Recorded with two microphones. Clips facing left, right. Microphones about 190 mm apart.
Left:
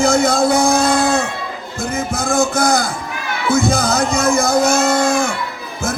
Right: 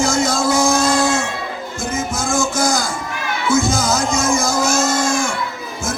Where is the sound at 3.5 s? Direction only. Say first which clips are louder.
Left 2 dB; 60° left (ahead or behind).